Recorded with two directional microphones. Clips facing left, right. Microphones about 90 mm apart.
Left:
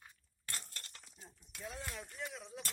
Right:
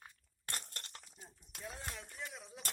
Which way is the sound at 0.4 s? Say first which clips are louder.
Right 2 dB; 55° right (ahead or behind).